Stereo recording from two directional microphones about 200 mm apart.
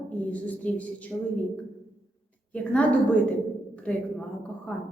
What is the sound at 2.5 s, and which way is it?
A woman's voice, 5° left (ahead or behind).